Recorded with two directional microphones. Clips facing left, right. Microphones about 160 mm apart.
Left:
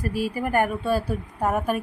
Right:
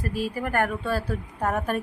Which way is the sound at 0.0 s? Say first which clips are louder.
Left 2 dB; 10° left (ahead or behind).